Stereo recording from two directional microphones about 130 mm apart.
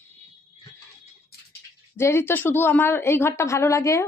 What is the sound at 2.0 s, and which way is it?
A woman's voice, 20° left (ahead or behind).